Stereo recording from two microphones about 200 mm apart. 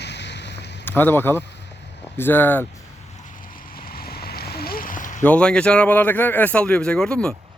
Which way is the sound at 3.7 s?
50° left (ahead or behind).